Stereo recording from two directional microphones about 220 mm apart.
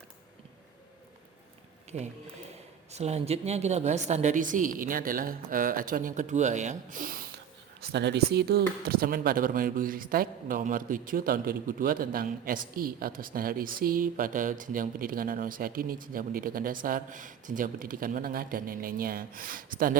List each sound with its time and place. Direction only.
1.9 s speech: 30° right (ahead or behind)
7.8 s speech: 50° right (ahead or behind)